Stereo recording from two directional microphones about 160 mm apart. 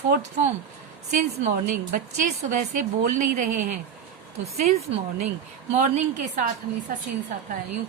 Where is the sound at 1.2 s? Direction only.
55° right (ahead or behind).